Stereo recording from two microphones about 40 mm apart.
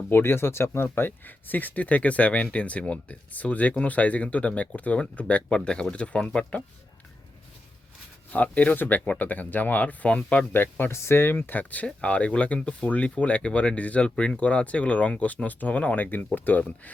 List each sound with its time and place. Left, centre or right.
0.1 s speech: left
8.3 s speech: left
10.5 s speech: left
11.4 s speech: left
11.9 s speech: left
14.0 s speech: left
16.0 s speech: left